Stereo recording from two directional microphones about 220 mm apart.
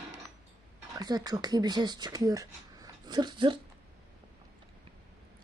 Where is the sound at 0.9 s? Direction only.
15° right (ahead or behind).